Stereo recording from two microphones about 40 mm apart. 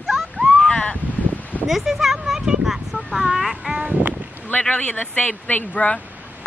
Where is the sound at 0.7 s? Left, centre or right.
Left.